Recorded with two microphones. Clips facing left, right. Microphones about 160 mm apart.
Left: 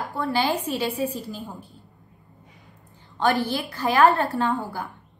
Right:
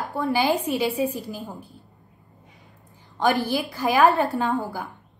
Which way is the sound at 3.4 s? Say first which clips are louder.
Right 1 dB; 10° right (ahead or behind).